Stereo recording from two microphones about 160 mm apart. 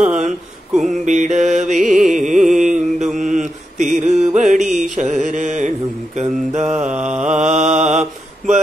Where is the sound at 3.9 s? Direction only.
45° right (ahead or behind).